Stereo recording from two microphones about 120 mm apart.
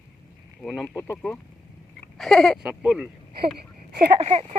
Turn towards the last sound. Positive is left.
turn(degrees=-65)  # may be behind; listen again after turning